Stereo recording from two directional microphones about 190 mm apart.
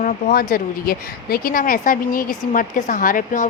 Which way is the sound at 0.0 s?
45° left (ahead or behind).